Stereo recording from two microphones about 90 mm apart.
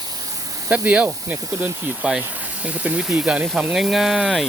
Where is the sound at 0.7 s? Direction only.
15° right (ahead or behind).